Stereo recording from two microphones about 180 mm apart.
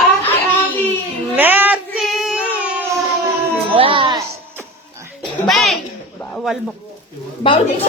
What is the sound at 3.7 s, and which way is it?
Speech, 30° right (ahead or behind).